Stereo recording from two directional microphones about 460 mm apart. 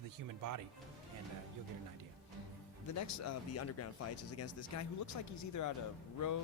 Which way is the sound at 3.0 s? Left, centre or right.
Left.